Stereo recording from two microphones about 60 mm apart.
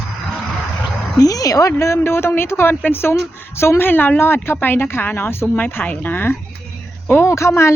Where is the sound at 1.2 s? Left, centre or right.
Left.